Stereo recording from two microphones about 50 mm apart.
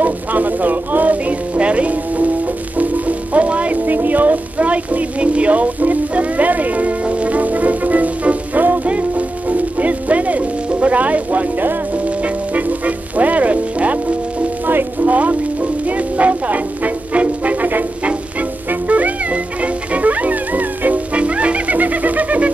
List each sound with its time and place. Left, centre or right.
0.0 s a sound: right
1.6 s music: right
12.5 s music: right
14.7 s music: right
16.2 s music: right